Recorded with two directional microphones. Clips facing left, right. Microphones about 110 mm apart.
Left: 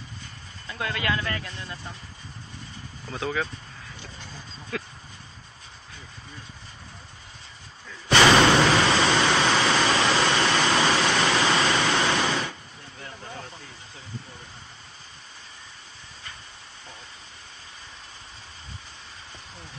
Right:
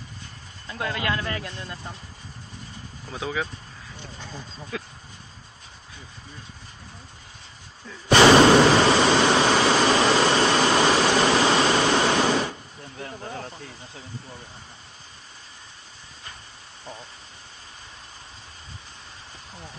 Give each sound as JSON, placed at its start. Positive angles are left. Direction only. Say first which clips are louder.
{"t": 0.7, "sound": "speech", "louder": "right 1 dB", "side_deg": -5}
{"t": 3.1, "sound": "speech", "louder": "left 1 dB", "side_deg": -5}
{"t": 4.7, "sound": "a sound", "louder": "left 1 dB", "side_deg": -5}
{"t": 8.1, "sound": "a sound", "louder": "right 4 dB", "side_deg": -5}
{"t": 10.4, "sound": "waterfall", "louder": "right 3 dB", "side_deg": 0}
{"t": 11.8, "sound": "waves", "louder": "right 3 dB", "side_deg": -5}